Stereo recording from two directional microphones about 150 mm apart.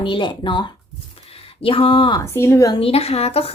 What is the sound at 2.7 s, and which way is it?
Speech, 40° left (ahead or behind).